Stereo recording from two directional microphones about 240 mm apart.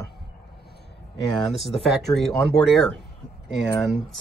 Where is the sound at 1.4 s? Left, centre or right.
Centre.